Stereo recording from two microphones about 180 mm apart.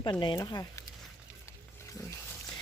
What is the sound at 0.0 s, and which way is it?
Speech, 25° left (ahead or behind).